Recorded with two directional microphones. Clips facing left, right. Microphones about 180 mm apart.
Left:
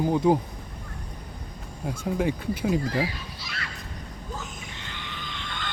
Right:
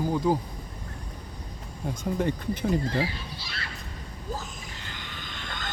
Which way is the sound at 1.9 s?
5° left (ahead or behind).